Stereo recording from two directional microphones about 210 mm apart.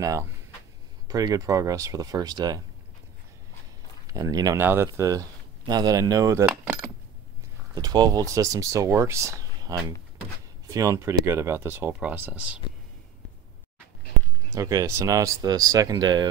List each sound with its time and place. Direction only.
1.0 s speech: 20° right (ahead or behind)
4.1 s speech: 15° right (ahead or behind)
6.5 s coin: 10° right (ahead or behind)
7.7 s speech: 20° right (ahead or behind)
14.5 s speech: 15° right (ahead or behind)